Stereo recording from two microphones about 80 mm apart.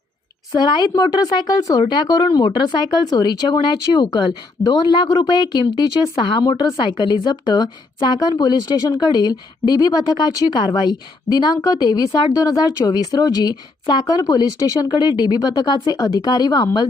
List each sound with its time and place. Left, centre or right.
0.6 s a woman's voice: left
1.9 s speech: left
6.8 s a woman's voice: left